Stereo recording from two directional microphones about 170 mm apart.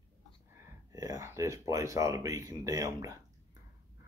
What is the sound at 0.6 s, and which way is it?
Speech, 20° right (ahead or behind).